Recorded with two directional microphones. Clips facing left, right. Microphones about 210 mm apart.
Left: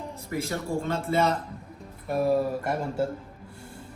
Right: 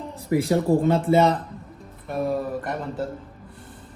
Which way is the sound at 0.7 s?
90° right.